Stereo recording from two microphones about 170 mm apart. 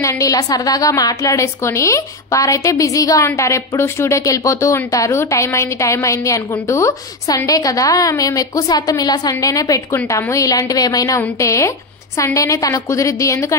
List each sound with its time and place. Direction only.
0.0 s a woman's voice: 20° left (ahead or behind)